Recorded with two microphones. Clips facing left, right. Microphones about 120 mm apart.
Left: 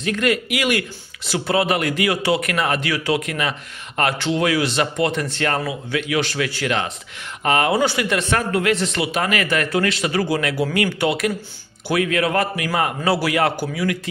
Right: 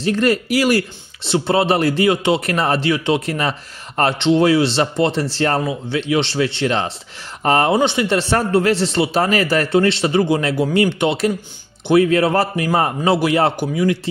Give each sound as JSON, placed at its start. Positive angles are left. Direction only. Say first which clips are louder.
{"t": 0.0, "sound": "speech", "louder": "right 4 dB", "side_deg": -35}
{"t": 7.7, "sound": "speech", "louder": "right 3 dB", "side_deg": -25}